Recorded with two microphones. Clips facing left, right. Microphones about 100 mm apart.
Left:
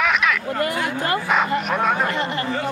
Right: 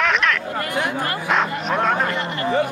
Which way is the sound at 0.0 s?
5° left (ahead or behind).